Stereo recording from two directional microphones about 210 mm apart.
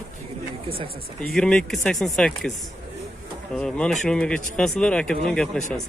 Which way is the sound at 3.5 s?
5° left (ahead or behind).